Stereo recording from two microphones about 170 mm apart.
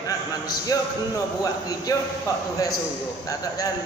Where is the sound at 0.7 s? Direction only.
20° left (ahead or behind).